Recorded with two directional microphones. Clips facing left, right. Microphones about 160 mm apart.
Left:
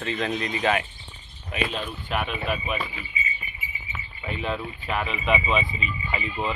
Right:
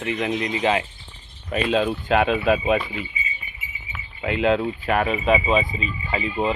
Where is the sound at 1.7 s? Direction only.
90° right.